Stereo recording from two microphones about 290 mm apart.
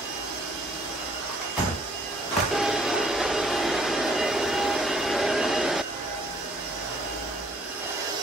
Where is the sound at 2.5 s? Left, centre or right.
Centre.